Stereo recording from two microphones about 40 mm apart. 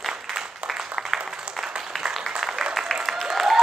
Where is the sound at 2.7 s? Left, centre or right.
Centre.